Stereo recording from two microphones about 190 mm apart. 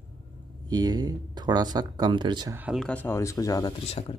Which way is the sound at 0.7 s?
20° right (ahead or behind).